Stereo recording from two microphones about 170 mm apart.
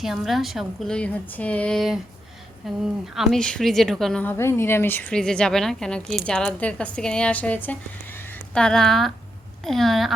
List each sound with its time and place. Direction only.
0.0 s speech: centre (ahead or behind)